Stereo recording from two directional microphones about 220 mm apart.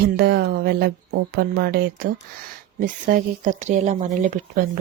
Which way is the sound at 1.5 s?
45° right (ahead or behind).